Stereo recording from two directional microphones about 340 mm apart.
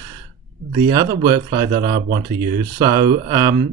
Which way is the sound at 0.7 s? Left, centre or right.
Centre.